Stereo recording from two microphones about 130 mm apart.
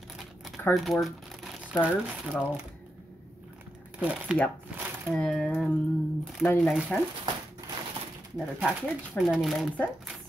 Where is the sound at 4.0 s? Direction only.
10° right (ahead or behind).